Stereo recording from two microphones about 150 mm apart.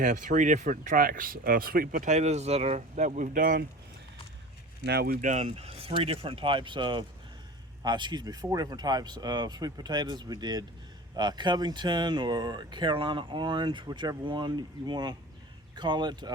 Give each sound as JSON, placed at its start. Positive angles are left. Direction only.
{"t": 0.0, "sound": "speech", "side_deg": -60}
{"t": 4.9, "sound": "speech", "side_deg": -90}
{"t": 5.3, "sound": "speech", "side_deg": -50}